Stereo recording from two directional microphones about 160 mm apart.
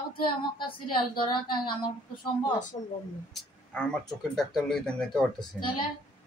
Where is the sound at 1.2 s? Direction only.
30° left (ahead or behind).